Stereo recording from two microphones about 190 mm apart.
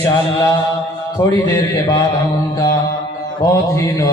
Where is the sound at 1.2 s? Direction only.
20° left (ahead or behind).